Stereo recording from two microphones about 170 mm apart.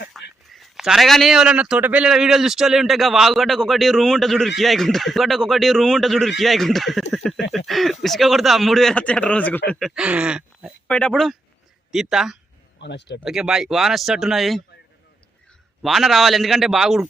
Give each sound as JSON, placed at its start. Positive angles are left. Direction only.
{"t": 0.1, "sound": "speech", "side_deg": 0}
{"t": 10.8, "sound": "speech", "side_deg": 5}
{"t": 12.8, "sound": "speech", "side_deg": 90}
{"t": 13.2, "sound": "speech", "side_deg": -5}
{"t": 15.8, "sound": "speech", "side_deg": 0}